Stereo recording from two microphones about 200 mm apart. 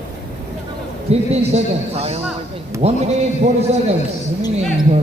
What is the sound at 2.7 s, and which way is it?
Speech, 15° right (ahead or behind).